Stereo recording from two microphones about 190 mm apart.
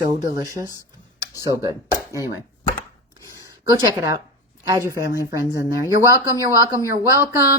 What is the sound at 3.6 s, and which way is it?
A woman's voice, 20° right (ahead or behind).